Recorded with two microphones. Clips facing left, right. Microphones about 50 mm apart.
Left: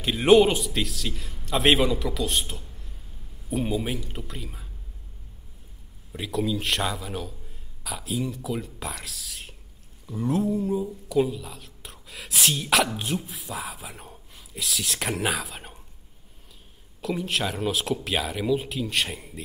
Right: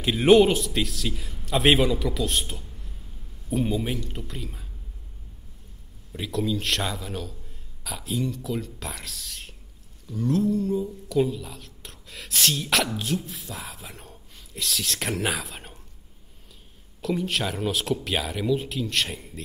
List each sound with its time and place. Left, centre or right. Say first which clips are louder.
0.0 s a man's voice: right 1 dB; centre
6.1 s a man's voice: even; centre
10.0 s speech: right 1 dB; centre
13.3 s speech: left 3 dB; centre
17.0 s a man's voice: right 1 dB; centre